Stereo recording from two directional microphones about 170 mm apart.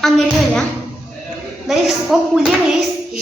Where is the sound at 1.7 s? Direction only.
Centre (ahead or behind).